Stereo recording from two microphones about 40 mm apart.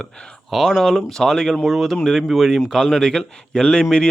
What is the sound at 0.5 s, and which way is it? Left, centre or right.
Speech, centre.